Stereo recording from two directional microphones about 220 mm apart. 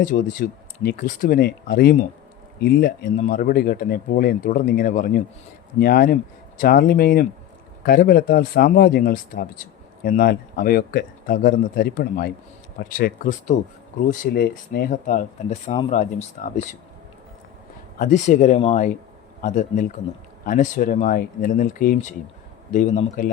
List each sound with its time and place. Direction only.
0.0 s speech: 40° left (ahead or behind)
18.0 s speech: 35° left (ahead or behind)